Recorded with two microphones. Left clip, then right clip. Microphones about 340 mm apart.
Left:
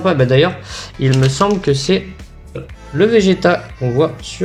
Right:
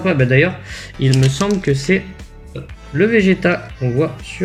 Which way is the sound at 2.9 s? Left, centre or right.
Left.